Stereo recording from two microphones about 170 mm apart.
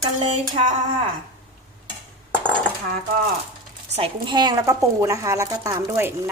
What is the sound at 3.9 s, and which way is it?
Speech, 30° right (ahead or behind).